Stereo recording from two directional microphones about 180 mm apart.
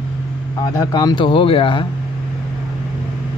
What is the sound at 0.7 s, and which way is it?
Speech, 20° left (ahead or behind).